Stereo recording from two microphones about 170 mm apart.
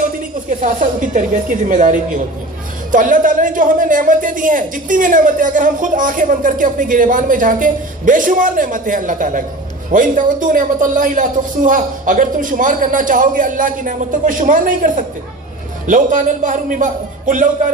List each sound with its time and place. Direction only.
0.6 s speech: 50° right (ahead or behind)